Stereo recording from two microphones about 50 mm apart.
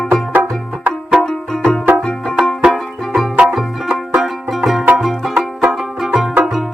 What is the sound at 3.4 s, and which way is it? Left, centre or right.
Banjo, centre.